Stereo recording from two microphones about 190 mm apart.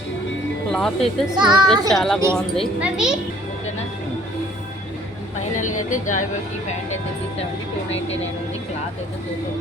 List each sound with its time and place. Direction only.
0.7 s speech: centre (ahead or behind)
1.4 s speech: 25° right (ahead or behind)
1.9 s a child's voice: centre (ahead or behind)
5.5 s a woman's voice: 40° left (ahead or behind)